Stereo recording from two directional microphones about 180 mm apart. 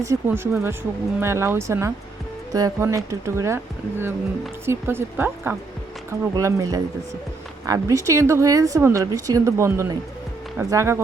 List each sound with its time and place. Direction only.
0.0 s a woman's voice: 15° right (ahead or behind)